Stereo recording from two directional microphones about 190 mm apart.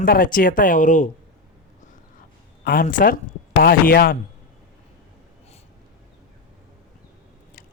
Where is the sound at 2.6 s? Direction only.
45° left (ahead or behind).